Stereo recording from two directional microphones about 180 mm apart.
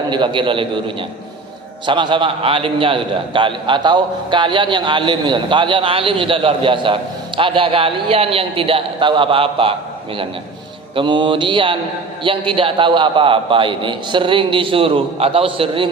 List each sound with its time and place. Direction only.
0.1 s a man's voice: 25° right (ahead or behind)
10.9 s a man's voice: 25° right (ahead or behind)